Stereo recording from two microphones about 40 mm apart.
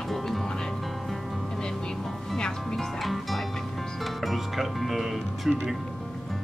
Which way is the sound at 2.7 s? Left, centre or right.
Centre.